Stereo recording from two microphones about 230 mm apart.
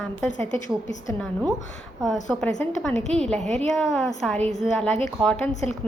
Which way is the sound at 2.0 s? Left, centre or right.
Centre.